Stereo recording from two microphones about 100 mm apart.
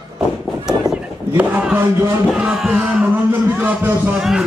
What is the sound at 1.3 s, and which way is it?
Music, 15° right (ahead or behind).